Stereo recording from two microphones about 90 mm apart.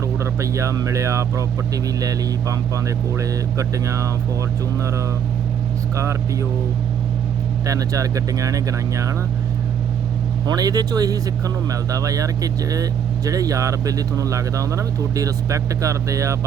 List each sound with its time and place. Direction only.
0.3 s speech: 35° right (ahead or behind)
7.7 s speech: 40° right (ahead or behind)
10.4 s speech: 45° right (ahead or behind)